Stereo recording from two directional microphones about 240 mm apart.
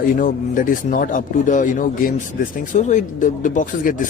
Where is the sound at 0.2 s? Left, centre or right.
Left.